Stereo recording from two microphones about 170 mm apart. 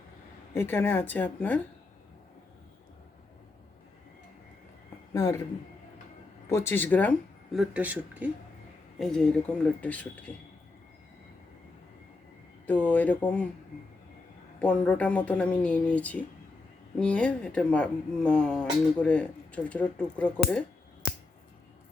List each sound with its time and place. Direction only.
0.5 s speech: 15° left (ahead or behind)
5.1 s speech: 15° left (ahead or behind)
6.5 s speech: 15° left (ahead or behind); by 8.3 s 10° right (ahead or behind)
9.0 s speech: 5° left (ahead or behind)
12.6 s speech: 10° left (ahead or behind)
14.6 s speech: 5° left (ahead or behind)